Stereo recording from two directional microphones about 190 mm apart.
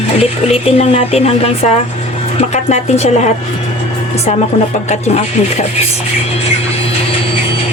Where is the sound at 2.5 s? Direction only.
35° left (ahead or behind).